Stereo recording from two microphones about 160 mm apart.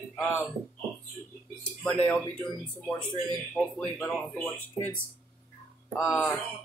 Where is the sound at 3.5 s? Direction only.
Centre (ahead or behind).